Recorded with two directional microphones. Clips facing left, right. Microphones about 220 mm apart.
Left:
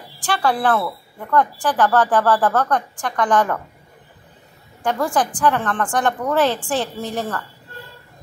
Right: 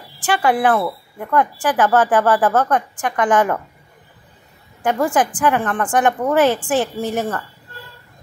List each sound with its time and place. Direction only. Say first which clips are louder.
0.2 s a woman's voice: right 3 dB; 15° right (ahead or behind)
4.8 s a woman's voice: right 3 dB; 15° right (ahead or behind)